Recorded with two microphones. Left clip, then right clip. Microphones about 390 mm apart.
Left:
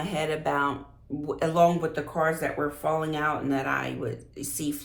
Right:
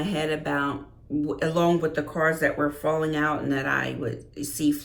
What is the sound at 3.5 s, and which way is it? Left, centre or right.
Speech, centre.